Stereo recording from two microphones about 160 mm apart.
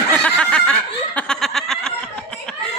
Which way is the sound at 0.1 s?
10° left (ahead or behind).